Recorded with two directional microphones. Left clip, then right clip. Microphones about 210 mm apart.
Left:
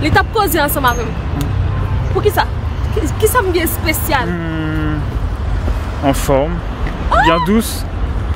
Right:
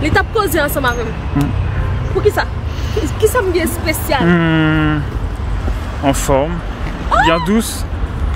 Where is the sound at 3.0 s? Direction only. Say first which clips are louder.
Even; 5° left (ahead or behind).